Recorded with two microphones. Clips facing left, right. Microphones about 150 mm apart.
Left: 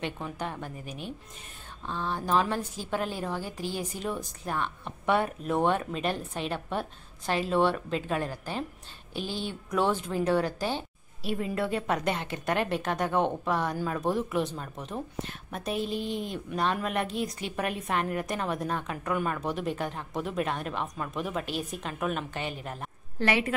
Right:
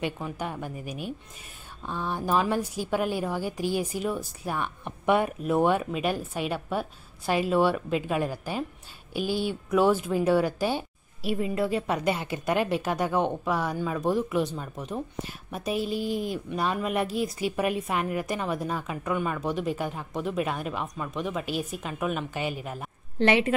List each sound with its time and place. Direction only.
0.0 s a woman's voice: 10° right (ahead or behind)
23.1 s a woman's voice: 25° right (ahead or behind)